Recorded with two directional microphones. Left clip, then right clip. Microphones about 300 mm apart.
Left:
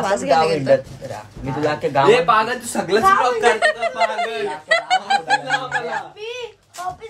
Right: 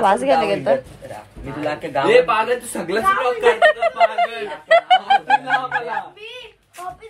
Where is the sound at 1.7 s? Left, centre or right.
Left.